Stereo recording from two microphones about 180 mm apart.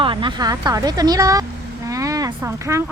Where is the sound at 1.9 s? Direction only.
20° right (ahead or behind).